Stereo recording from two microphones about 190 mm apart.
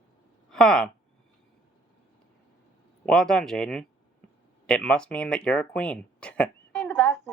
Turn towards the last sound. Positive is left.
turn(degrees=10)  # may be behind; listen again after turning